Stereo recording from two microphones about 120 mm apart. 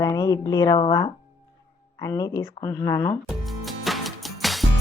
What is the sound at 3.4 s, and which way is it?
Music, centre (ahead or behind).